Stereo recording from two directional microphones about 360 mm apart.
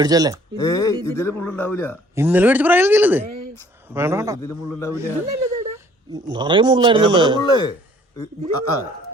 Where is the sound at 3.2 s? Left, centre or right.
Right.